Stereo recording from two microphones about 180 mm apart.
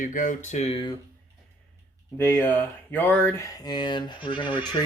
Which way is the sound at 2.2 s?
10° left (ahead or behind).